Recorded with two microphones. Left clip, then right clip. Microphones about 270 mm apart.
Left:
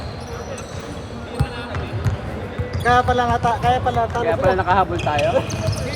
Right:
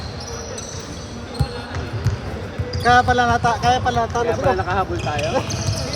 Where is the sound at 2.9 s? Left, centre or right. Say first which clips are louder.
Right 2 dB; right.